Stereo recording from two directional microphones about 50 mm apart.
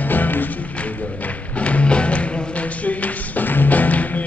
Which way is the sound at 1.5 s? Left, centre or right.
Left.